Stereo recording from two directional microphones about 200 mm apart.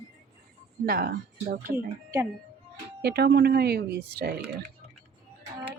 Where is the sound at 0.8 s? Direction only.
50° right (ahead or behind).